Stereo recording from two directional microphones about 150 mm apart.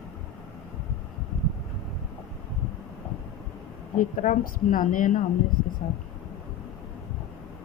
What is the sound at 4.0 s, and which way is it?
Speech, 65° left (ahead or behind).